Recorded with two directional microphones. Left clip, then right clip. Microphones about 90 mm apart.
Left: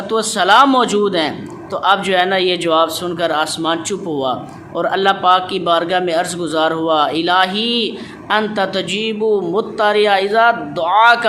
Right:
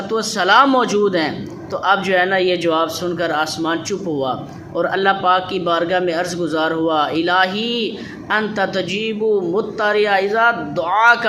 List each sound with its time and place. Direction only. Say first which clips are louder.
0.1 s a man's voice: left 3 dB; 50° left (ahead or behind)
0.4 s speech: left 2 dB; 40° left (ahead or behind)
0.7 s a man's voice: left 1 dB; 55° left (ahead or behind)
4.8 s a man's voice: left 2 dB; 45° left (ahead or behind)